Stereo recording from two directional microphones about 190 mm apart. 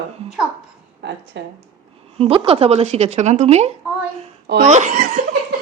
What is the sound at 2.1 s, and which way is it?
Speech, 30° right (ahead or behind).